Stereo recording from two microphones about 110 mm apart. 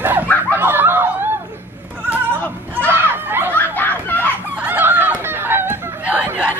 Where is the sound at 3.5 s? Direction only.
15° left (ahead or behind).